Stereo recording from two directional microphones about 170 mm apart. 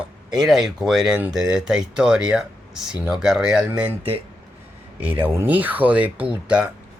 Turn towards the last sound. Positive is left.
turn(degrees=-5)  # may be behind; listen again after turning